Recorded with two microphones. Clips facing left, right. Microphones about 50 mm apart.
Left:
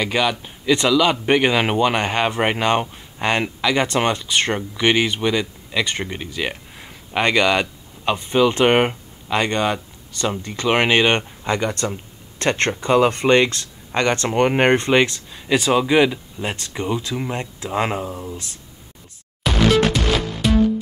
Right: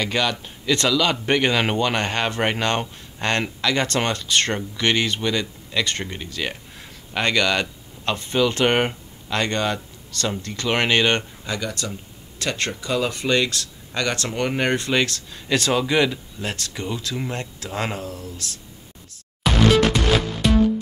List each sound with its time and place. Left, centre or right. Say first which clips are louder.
0.0 s speech: left 3 dB; centre
11.4 s speech: left 6 dB; left
19.4 s music: even; centre